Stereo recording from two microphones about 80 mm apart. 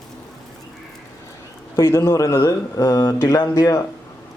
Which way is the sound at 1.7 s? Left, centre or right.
Left.